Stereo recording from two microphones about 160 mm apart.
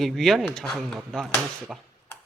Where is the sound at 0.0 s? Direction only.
Centre (ahead or behind).